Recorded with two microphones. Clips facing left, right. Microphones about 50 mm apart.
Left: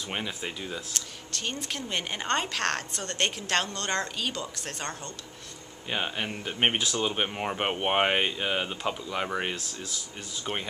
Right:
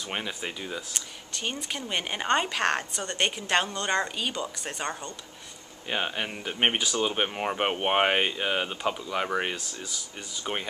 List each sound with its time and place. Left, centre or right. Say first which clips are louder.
0.1 s speech: right 1 dB; centre